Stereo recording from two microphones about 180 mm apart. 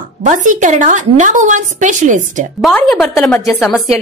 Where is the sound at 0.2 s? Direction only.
45° right (ahead or behind).